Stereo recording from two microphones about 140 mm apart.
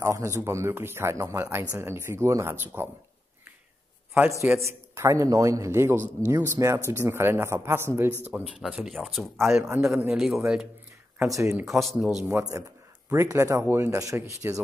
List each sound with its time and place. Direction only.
0.0 s a man's voice: 20° right (ahead or behind)
4.6 s a man's voice: 20° right (ahead or behind)
8.3 s speech: 5° right (ahead or behind)
9.5 s a man's voice: 20° right (ahead or behind)
10.1 s speech: 5° right (ahead or behind)
11.2 s a man's voice: 25° right (ahead or behind)
11.5 s speech: centre (ahead or behind)
12.3 s a man's voice: 20° right (ahead or behind)